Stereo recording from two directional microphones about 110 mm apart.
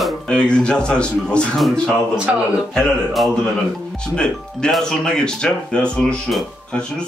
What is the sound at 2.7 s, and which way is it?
Speech, 5° left (ahead or behind).